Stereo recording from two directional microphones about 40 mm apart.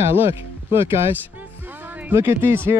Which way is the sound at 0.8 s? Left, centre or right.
Right.